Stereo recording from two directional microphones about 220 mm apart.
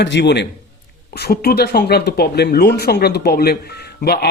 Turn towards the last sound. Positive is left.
turn(degrees=45)  # may be behind; listen again after turning